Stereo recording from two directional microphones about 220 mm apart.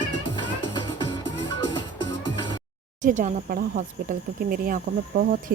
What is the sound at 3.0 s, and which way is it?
Speech, 35° right (ahead or behind).